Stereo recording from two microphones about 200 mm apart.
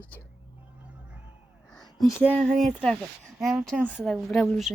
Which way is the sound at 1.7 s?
Centre (ahead or behind).